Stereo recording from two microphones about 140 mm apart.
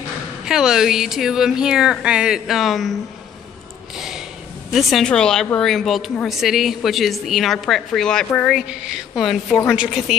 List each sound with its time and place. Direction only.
0.5 s speech: 5° right (ahead or behind)
3.9 s snort: 5° right (ahead or behind)
4.7 s speech: centre (ahead or behind)